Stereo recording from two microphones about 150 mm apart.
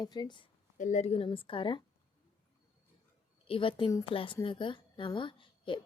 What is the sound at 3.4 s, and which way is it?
A woman's voice, 35° left (ahead or behind).